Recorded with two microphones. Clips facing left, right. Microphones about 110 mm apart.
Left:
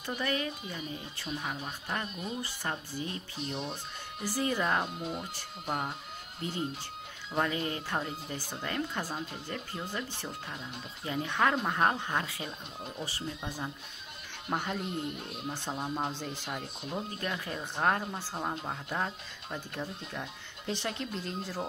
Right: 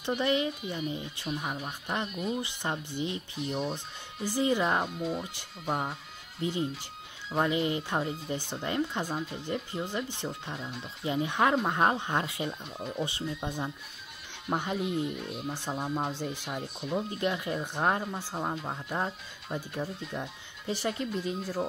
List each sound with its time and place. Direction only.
0.0 s speech: 20° right (ahead or behind)
7.3 s speech: 15° right (ahead or behind)